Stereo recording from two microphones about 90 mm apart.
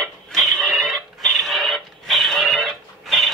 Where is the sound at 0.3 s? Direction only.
5° left (ahead or behind).